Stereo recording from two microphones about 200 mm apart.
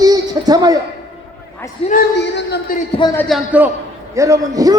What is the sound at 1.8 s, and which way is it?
Speech, 30° left (ahead or behind).